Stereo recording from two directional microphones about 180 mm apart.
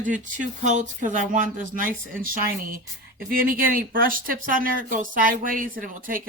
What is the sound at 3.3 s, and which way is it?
Speech, 50° right (ahead or behind).